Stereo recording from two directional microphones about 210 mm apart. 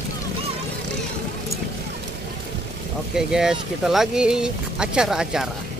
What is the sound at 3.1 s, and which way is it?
Speech, 5° right (ahead or behind).